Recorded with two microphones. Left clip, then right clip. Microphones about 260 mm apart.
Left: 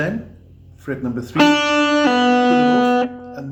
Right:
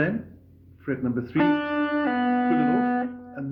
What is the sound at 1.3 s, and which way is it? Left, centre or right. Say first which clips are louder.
Music: left 10 dB; left.